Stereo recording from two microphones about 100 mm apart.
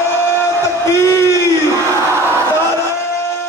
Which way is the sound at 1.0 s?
30° left (ahead or behind).